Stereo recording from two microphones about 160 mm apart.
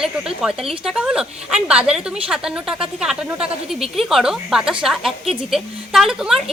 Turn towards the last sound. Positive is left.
turn(degrees=-5)  # may be behind; listen again after turning